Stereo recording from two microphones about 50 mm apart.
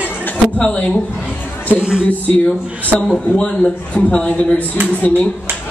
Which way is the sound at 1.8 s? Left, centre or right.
Centre.